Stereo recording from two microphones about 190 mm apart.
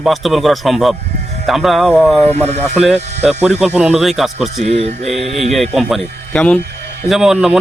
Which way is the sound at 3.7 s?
5° right (ahead or behind).